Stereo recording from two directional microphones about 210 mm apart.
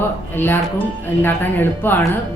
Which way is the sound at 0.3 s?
10° left (ahead or behind).